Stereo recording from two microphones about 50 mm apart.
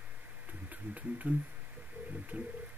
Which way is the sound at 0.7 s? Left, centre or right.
Right.